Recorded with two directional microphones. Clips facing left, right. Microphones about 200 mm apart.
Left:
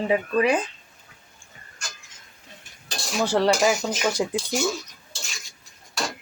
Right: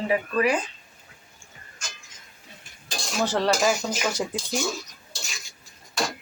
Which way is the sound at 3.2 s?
10° left (ahead or behind).